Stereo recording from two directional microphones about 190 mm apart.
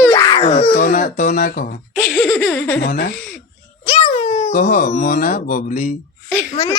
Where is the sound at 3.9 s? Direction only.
40° left (ahead or behind).